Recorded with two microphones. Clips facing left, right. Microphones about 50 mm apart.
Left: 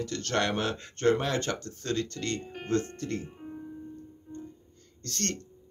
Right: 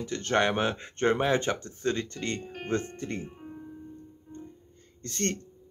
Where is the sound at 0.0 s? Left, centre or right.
Right.